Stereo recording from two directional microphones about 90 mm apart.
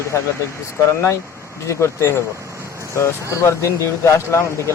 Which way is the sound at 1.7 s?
30° left (ahead or behind).